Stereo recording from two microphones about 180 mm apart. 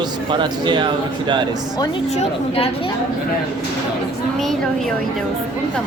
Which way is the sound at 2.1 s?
35° left (ahead or behind).